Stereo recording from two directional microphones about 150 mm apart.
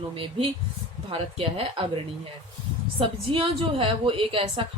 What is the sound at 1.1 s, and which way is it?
Speech, 40° right (ahead or behind).